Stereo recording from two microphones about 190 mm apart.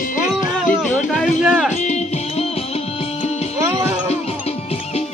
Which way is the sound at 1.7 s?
35° left (ahead or behind).